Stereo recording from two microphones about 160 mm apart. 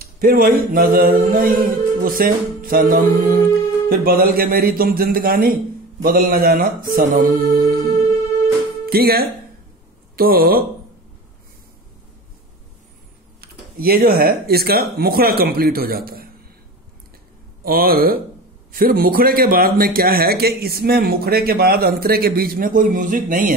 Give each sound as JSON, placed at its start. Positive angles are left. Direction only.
{"t": 0.0, "sound": "a sound", "side_deg": -65}
{"t": 8.8, "sound": "a man's voice", "side_deg": -75}
{"t": 13.4, "sound": "a man's voice", "side_deg": -70}
{"t": 17.6, "sound": "a man's voice", "side_deg": -70}